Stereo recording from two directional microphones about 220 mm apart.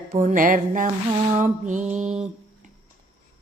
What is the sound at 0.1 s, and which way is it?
Speech, 35° right (ahead or behind).